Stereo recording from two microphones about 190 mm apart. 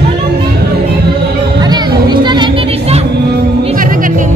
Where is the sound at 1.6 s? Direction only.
20° right (ahead or behind).